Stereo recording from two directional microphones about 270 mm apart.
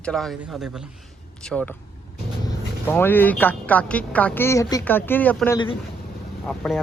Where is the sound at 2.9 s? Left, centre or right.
Centre.